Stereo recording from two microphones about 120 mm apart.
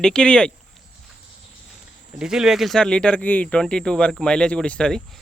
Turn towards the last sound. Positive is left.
turn(degrees=5)  # may be behind; listen again after turning